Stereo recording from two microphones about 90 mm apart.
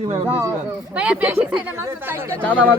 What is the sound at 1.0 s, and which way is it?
Speech, 15° right (ahead or behind).